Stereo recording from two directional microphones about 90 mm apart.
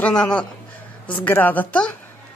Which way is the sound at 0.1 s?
10° left (ahead or behind).